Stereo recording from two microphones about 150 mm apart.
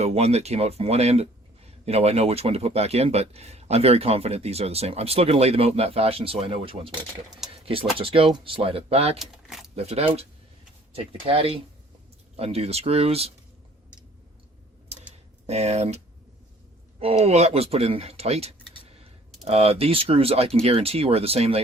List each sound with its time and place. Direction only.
0.0 s speech: 45° right (ahead or behind)
9.1 s keys jangling: centre (ahead or behind)
9.7 s speech: 45° right (ahead or behind)
15.4 s speech: 45° right (ahead or behind)
17.0 s speech: 45° right (ahead or behind)